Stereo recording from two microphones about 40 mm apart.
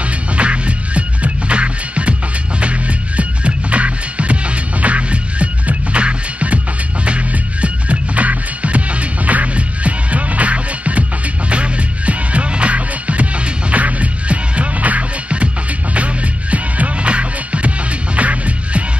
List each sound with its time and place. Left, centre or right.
0.4 s music: right
3.2 s music: right